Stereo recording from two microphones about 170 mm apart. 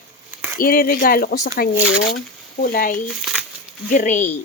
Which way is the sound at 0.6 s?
60° left (ahead or behind).